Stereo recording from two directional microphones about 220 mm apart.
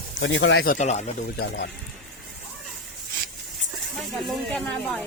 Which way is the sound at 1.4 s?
50° left (ahead or behind).